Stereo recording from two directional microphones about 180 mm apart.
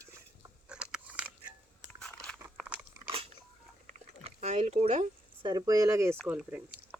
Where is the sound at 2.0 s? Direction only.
5° left (ahead or behind).